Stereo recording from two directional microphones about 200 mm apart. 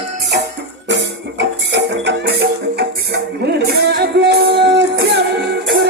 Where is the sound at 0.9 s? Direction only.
65° right (ahead or behind).